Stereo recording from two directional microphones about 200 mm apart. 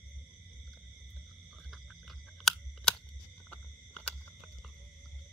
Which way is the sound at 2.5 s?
Centre (ahead or behind).